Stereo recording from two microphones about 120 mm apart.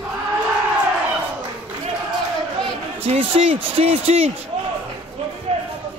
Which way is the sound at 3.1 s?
55° right (ahead or behind).